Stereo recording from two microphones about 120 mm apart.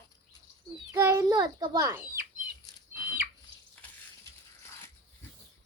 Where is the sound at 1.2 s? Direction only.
35° right (ahead or behind).